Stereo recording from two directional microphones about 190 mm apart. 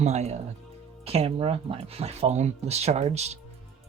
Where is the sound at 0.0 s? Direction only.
35° right (ahead or behind).